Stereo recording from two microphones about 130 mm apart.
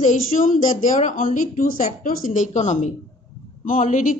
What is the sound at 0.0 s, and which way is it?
A woman's voice, 80° left.